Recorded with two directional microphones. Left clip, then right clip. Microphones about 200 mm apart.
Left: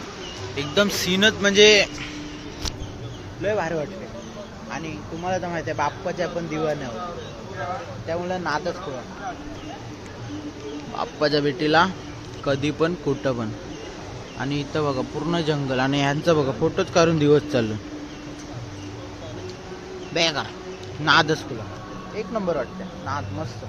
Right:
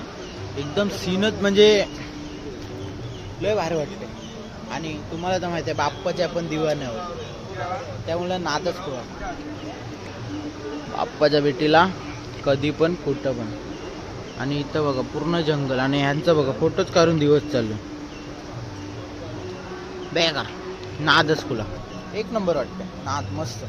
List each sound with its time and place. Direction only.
0.8 s speech: 5° left (ahead or behind)
1.4 s speech: 15° right (ahead or behind)
3.4 s speech: 5° right (ahead or behind)
5.2 s speech: 15° right (ahead or behind)
8.1 s speech: 5° right (ahead or behind)
10.9 s speech: centre (ahead or behind)
14.3 s speech: 5° left (ahead or behind)
20.1 s speech: 5° left (ahead or behind)
22.4 s speech: 5° right (ahead or behind)